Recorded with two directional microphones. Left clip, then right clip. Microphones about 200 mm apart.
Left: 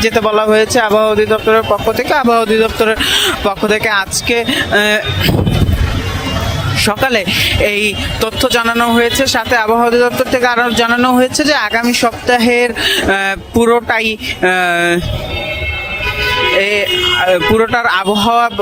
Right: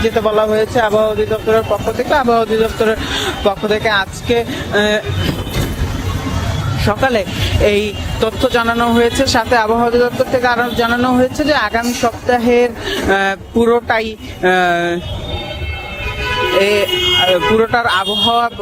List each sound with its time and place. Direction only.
0.0 s speech: 25° left (ahead or behind)
6.8 s speech: 20° left (ahead or behind)
9.7 s speech: 25° left (ahead or behind)
16.6 s speech: 5° left (ahead or behind)
17.2 s speech: 20° left (ahead or behind)